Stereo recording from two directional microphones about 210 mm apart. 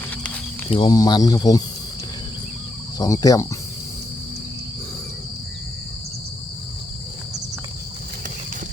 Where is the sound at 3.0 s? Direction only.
15° left (ahead or behind).